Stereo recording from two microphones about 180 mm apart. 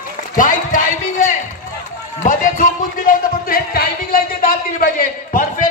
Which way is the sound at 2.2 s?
45° left (ahead or behind).